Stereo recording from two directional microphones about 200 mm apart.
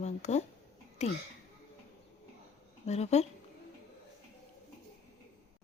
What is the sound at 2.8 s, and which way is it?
Speech, 35° left (ahead or behind).